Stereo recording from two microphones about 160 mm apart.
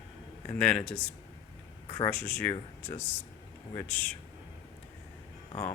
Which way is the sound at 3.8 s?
10° left (ahead or behind).